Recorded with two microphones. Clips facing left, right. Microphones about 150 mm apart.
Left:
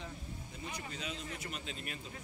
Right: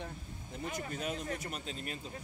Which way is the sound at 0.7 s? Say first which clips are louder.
Right 6 dB; 50° right (ahead or behind).